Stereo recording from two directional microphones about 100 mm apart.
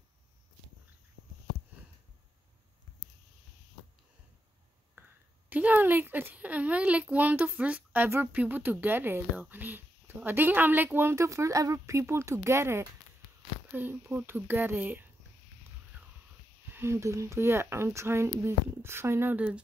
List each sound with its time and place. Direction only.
5.0 s a sound: 20° right (ahead or behind)
5.5 s a woman's voice: 15° right (ahead or behind)
16.7 s a woman's voice: 25° right (ahead or behind)